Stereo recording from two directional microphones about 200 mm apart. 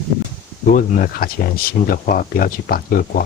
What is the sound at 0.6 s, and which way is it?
Speech, 45° left (ahead or behind).